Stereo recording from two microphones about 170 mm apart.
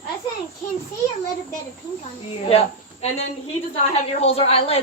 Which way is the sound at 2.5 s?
40° left (ahead or behind).